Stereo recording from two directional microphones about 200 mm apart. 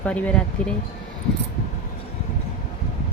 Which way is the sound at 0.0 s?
5° left (ahead or behind).